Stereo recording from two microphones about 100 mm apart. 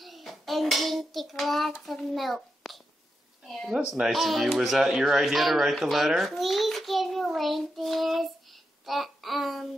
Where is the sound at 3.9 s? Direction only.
Centre (ahead or behind).